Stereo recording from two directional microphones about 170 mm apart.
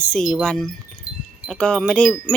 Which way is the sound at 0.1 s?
Centre (ahead or behind).